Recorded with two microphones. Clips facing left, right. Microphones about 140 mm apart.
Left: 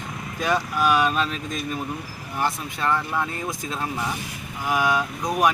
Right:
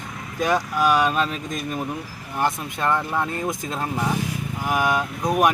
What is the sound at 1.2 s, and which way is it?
Speech, 45° right (ahead or behind).